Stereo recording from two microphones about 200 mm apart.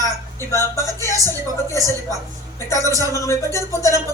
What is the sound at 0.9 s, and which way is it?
Speech, 15° left (ahead or behind).